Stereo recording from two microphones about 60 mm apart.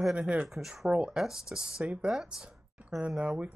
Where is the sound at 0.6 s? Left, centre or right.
Centre.